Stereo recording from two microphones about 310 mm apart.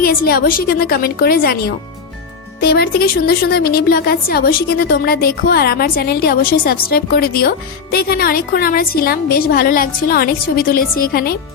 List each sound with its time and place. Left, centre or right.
0.0 s a woman's voice: left